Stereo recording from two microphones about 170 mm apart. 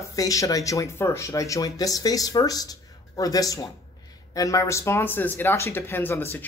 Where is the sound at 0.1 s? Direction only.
20° left (ahead or behind).